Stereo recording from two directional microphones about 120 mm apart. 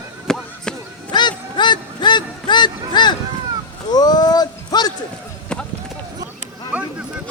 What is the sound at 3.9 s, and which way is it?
Speech, 35° left (ahead or behind).